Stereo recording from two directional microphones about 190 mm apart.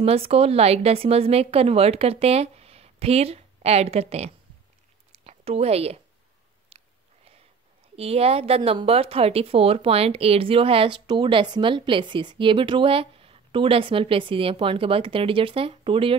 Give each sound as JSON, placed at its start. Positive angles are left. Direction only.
{"t": 0.0, "sound": "speech", "side_deg": -30}
{"t": 5.1, "sound": "a sound", "side_deg": -30}
{"t": 7.9, "sound": "speech", "side_deg": -30}